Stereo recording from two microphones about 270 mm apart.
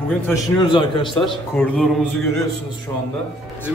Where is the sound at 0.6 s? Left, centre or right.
Centre.